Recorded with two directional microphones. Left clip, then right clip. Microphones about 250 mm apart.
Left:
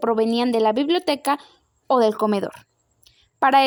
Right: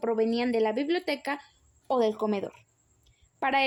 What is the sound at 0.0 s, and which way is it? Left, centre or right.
A woman's voice, left.